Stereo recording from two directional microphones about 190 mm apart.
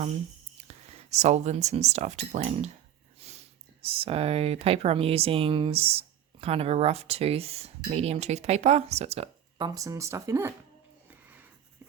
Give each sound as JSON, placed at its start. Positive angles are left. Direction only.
{"t": 0.7, "sound": "speech", "side_deg": -35}
{"t": 11.1, "sound": "music", "side_deg": -10}